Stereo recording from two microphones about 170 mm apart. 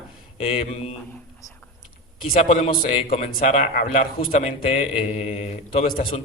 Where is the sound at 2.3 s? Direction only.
45° left (ahead or behind).